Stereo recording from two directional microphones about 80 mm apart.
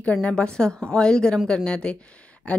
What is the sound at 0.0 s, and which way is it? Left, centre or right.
A woman's voice, centre.